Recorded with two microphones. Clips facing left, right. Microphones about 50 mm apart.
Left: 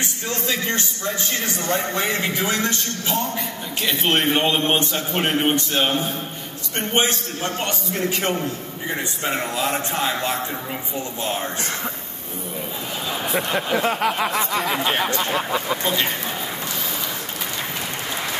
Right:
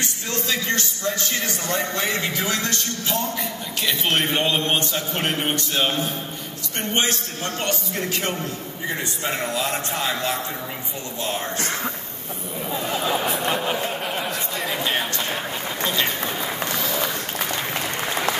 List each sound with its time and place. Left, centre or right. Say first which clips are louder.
0.0 s a man's voice: left 1 dB; left
9.2 s a man's voice: left 2 dB; left
13.6 s a sound: left 4 dB; left
14.5 s speech: left 4 dB; left
14.9 s a man's voice: left 3 dB; left
15.3 s a sound: left 6 dB; left